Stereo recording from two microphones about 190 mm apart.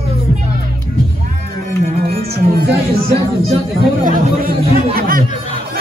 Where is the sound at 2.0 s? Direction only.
55° right (ahead or behind).